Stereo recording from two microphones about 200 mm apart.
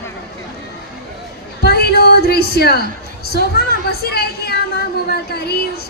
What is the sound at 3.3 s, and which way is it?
A woman's voice, 50° left (ahead or behind).